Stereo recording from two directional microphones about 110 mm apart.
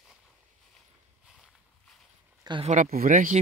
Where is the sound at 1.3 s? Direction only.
Centre (ahead or behind).